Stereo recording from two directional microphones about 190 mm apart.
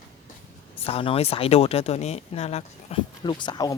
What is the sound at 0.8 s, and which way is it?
Speech, 30° left (ahead or behind).